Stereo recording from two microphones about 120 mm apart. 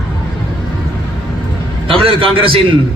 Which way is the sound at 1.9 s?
50° right (ahead or behind).